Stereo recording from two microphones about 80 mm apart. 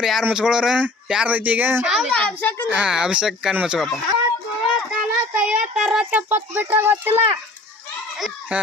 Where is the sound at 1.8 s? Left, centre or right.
Centre.